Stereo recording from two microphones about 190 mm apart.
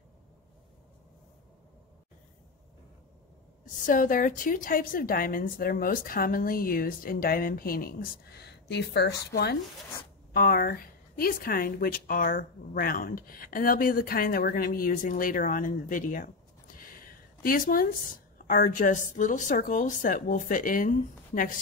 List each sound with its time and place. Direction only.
3.8 s speech: 45° left (ahead or behind)